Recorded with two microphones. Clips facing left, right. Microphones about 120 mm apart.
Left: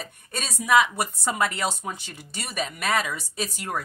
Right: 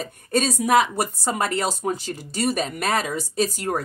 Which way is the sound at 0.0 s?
40° right (ahead or behind).